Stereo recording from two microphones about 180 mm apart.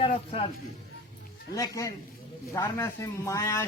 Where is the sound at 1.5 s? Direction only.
20° left (ahead or behind).